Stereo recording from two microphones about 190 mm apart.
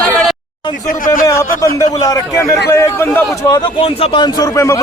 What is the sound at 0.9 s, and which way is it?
Speech, 45° left (ahead or behind).